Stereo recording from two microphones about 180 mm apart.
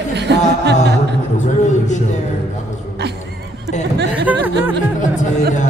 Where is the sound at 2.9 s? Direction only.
70° right (ahead or behind).